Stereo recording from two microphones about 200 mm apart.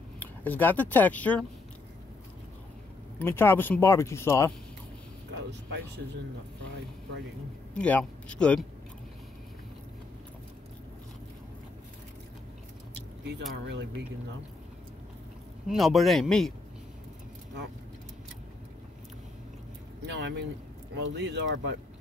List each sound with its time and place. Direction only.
0.2 s speech: 10° left (ahead or behind)
3.2 s speech: 10° left (ahead or behind)
7.7 s a man's voice: 5° left (ahead or behind)
13.7 s speech: 55° right (ahead or behind)
15.7 s a man's voice: centre (ahead or behind)
20.0 s speech: 60° right (ahead or behind)